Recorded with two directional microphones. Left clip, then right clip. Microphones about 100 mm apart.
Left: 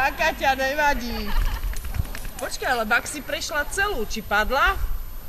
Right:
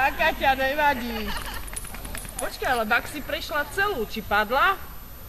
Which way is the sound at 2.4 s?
40° left (ahead or behind).